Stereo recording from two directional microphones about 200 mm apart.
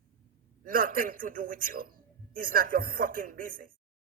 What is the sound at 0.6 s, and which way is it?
Speech, 45° right (ahead or behind).